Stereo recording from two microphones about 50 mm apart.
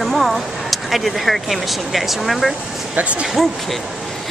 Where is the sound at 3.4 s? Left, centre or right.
Centre.